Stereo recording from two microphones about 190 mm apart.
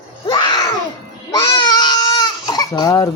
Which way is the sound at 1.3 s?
20° left (ahead or behind).